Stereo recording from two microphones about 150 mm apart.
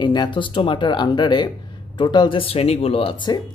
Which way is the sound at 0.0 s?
30° left (ahead or behind).